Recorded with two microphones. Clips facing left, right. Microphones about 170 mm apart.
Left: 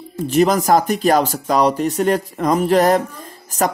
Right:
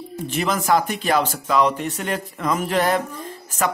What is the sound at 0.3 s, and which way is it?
Speech, 40° left (ahead or behind).